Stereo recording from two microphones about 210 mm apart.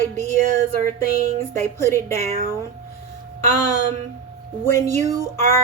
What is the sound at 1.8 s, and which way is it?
Speech, 10° left (ahead or behind).